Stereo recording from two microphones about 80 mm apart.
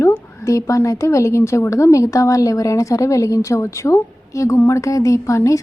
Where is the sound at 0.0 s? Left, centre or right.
Left.